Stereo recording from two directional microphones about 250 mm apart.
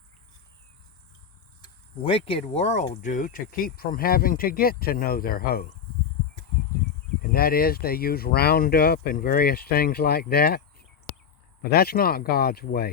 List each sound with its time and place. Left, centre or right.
1.6 s speech: left
7.2 s speech: left